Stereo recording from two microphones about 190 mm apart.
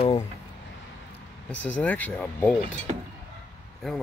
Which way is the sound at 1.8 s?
10° left (ahead or behind).